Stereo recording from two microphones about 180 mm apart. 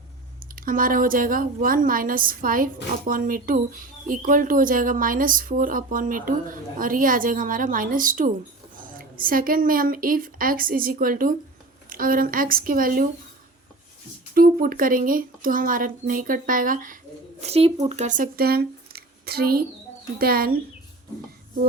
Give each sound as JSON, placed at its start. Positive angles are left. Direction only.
{"t": 0.5, "sound": "speech", "side_deg": -50}
{"t": 14.3, "sound": "speech", "side_deg": -50}
{"t": 17.4, "sound": "speech", "side_deg": -35}